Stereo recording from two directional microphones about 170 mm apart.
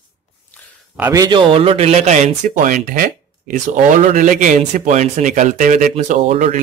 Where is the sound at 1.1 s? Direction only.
25° right (ahead or behind).